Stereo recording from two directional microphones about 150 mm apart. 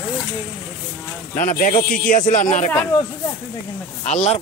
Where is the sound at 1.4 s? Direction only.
65° left (ahead or behind).